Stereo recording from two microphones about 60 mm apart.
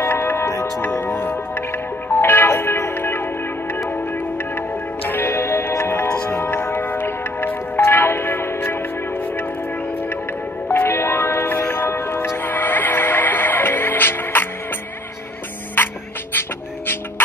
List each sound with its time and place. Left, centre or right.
0.0 s music: left
5.0 s music: left
10.7 s music: left
16.3 s music: left